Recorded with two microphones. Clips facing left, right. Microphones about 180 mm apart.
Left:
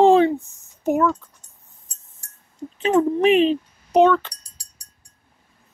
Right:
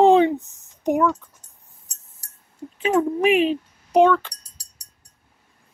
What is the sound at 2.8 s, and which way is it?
Speech, 5° right (ahead or behind).